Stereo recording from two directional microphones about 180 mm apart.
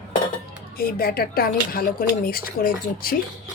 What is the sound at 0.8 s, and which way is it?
A woman's voice, 55° left (ahead or behind).